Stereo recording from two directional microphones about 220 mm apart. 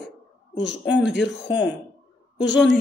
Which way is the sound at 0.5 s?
55° left (ahead or behind).